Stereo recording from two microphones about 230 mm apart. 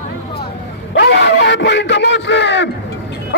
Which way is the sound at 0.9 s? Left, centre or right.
Left.